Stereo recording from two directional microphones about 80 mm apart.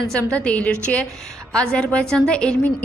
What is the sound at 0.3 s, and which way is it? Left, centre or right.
A woman's voice, centre.